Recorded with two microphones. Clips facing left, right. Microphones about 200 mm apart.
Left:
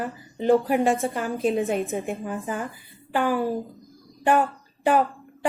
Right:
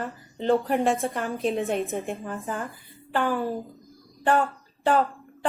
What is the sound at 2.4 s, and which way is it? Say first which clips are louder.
Speech: left 2 dB; 15° left (ahead or behind).